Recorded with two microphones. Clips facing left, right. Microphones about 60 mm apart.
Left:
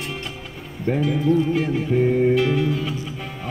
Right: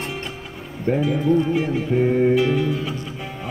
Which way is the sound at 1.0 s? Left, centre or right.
Centre.